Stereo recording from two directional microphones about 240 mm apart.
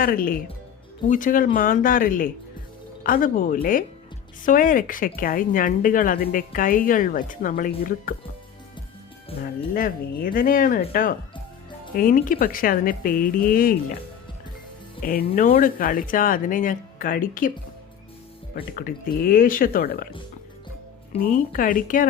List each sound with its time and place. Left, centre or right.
0.0 s speech: left
9.7 s speech: left
15.3 s speech: left
18.5 s speech: left
21.1 s speech: left